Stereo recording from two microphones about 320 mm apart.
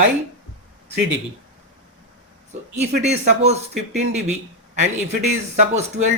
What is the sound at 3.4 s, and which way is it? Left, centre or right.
Speech, right.